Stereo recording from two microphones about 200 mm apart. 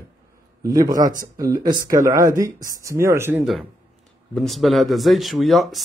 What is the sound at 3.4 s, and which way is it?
Speech, centre (ahead or behind).